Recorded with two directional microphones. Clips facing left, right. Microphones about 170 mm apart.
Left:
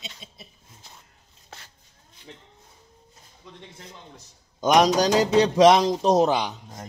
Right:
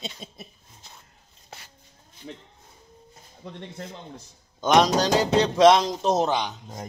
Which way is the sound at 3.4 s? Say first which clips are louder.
Right 8 dB; 60° right (ahead or behind).